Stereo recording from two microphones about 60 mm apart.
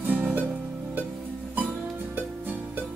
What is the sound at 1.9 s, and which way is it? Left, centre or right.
Music, right.